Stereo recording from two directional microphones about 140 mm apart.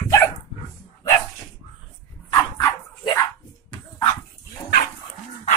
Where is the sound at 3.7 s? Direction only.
35° left (ahead or behind).